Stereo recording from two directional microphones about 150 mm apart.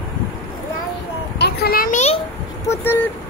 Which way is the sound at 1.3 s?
90° left.